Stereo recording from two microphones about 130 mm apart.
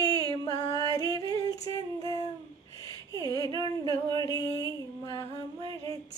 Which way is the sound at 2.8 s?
25° left (ahead or behind).